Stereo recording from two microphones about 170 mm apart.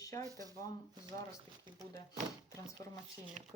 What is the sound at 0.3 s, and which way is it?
Speech, 20° right (ahead or behind).